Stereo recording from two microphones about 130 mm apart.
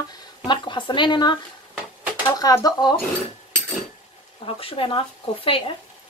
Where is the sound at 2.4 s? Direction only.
30° left (ahead or behind).